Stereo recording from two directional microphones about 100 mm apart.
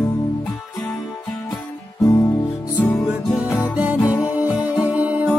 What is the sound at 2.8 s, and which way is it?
Music, 15° left (ahead or behind).